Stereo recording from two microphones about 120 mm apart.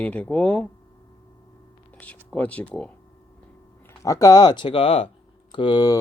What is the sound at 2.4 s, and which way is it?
Speech, 10° left (ahead or behind).